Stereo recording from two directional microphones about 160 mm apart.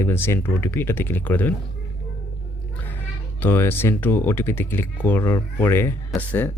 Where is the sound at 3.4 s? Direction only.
15° left (ahead or behind).